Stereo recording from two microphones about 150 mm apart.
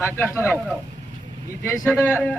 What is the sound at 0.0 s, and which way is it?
Speech, 15° left (ahead or behind).